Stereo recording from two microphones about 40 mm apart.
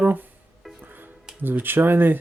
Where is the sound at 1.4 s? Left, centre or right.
Right.